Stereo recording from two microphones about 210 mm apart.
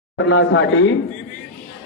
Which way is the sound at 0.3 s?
65° left (ahead or behind).